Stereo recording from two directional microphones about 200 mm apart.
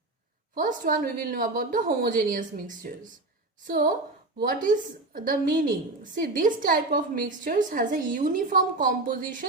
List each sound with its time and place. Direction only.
0.6 s a woman's voice: 45° right (ahead or behind)